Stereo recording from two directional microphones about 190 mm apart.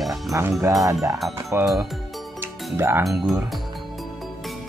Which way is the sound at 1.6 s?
Centre (ahead or behind).